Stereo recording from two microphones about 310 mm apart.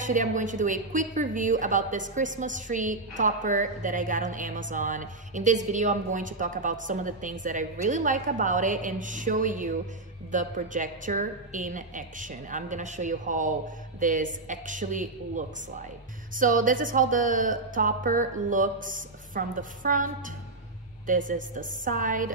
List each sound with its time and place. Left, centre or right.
0.0 s speech: right
21.1 s speech: right